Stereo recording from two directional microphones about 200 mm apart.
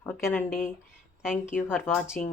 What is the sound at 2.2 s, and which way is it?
Speech, 5° left (ahead or behind).